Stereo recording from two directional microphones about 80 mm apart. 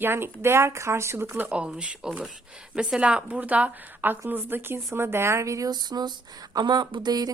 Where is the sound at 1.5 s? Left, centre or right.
Centre; by 5.7 s right.